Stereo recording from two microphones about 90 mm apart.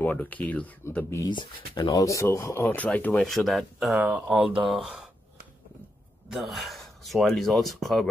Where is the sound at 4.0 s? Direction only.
15° right (ahead or behind).